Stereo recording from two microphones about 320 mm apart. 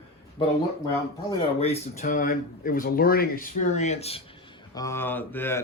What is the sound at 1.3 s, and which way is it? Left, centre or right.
Speech, centre.